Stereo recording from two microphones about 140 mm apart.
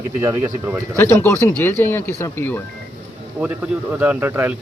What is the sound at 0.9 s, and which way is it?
Speech, 20° left (ahead or behind).